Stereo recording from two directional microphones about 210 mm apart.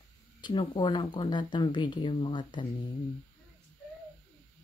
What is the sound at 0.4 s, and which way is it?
Speech, 20° left (ahead or behind).